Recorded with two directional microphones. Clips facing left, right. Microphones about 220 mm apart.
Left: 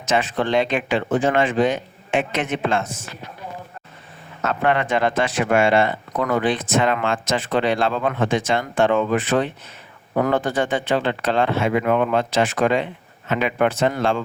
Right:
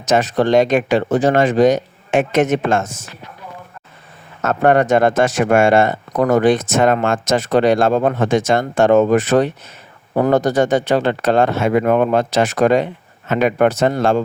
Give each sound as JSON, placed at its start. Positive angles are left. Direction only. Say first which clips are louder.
{"t": 0.0, "sound": "speech", "louder": "right 6 dB", "side_deg": -40}
{"t": 4.4, "sound": "speech", "louder": "right 7 dB", "side_deg": -45}